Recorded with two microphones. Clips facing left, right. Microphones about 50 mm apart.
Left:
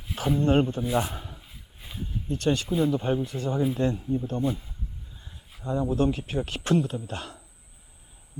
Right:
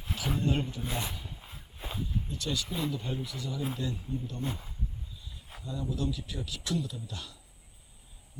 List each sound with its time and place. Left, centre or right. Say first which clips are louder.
0.2 s speech: left 9 dB; left
0.9 s a sound: left 10 dB; left
1.5 s dog: right 3 dB; right
2.0 s speech: left 5 dB; left